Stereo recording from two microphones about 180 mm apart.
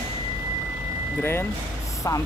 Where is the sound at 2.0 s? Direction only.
20° left (ahead or behind).